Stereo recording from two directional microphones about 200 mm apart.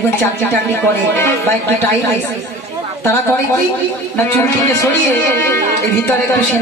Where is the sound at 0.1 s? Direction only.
10° left (ahead or behind).